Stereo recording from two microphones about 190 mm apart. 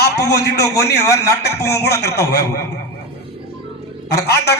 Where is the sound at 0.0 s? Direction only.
60° left (ahead or behind).